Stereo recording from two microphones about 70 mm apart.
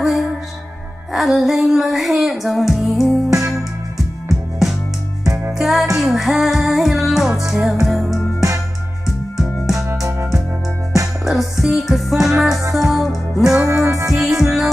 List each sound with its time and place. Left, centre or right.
0.0 s music: centre
3.3 s music: right
5.2 s music: right
5.6 s music: centre
9.4 s music: centre
11.2 s music: centre
13.6 s music: right
14.2 s music: centre